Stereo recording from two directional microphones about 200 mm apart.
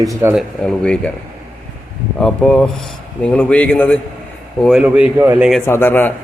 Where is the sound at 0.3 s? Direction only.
5° left (ahead or behind).